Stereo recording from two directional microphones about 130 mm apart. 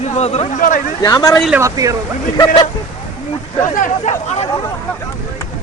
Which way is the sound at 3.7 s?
75° left (ahead or behind).